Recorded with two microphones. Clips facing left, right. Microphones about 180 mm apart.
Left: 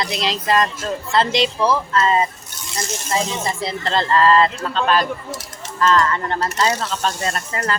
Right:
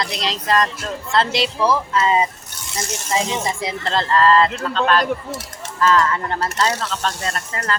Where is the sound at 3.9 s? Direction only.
Centre (ahead or behind).